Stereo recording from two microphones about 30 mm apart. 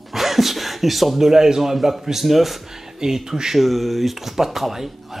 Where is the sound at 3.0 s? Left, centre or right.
Centre.